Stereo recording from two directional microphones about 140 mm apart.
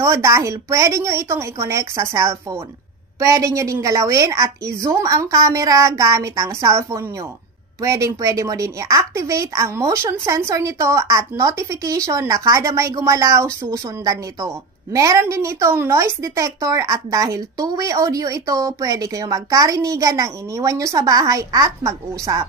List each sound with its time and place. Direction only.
0.0 s a woman's voice: 20° right (ahead or behind)